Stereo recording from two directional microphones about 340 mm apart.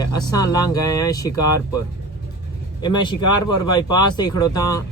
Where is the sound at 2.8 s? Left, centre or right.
Centre.